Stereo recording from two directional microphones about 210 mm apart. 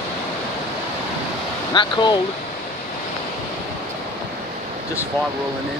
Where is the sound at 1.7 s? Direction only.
20° left (ahead or behind).